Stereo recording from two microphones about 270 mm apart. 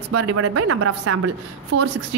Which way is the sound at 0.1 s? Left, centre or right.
Right.